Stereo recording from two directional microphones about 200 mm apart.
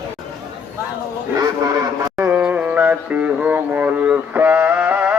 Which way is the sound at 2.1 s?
5° right (ahead or behind).